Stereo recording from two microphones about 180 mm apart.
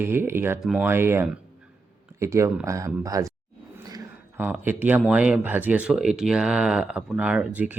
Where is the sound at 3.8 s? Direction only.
20° right (ahead or behind).